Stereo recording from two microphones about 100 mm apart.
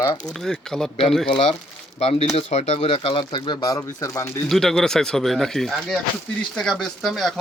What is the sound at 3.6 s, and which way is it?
Speech, 40° left (ahead or behind).